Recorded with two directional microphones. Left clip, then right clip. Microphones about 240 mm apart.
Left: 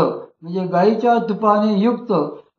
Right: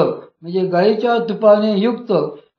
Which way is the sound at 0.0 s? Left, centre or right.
Right.